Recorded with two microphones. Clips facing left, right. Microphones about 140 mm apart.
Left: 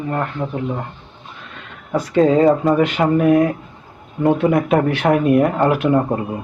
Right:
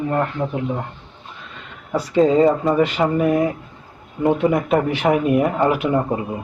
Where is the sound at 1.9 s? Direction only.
5° right (ahead or behind).